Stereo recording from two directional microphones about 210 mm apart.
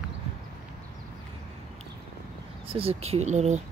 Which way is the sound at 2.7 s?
25° right (ahead or behind).